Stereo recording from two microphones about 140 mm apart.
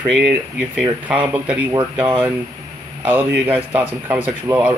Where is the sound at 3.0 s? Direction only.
10° right (ahead or behind).